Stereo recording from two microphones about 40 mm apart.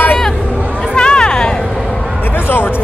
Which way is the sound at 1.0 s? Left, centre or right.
Left.